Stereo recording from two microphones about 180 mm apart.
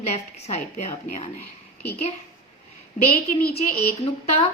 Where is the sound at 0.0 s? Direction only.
35° left (ahead or behind).